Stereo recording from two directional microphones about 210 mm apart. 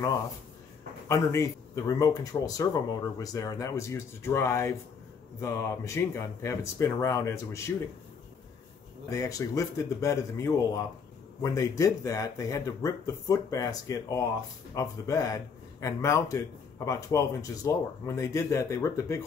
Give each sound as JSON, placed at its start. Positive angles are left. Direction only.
{"t": 1.0, "sound": "speech", "side_deg": 15}
{"t": 9.1, "sound": "speech", "side_deg": 15}